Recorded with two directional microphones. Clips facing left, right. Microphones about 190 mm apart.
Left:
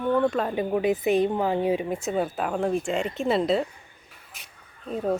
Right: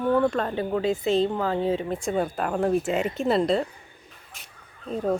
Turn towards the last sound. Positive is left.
turn(degrees=5)  # may be behind; listen again after turning